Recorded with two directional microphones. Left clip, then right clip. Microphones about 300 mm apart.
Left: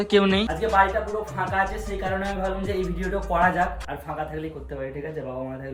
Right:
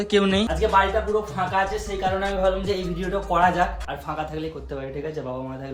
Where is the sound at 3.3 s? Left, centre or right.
Centre.